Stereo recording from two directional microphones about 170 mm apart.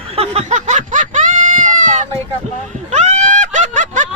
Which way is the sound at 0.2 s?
40° right (ahead or behind).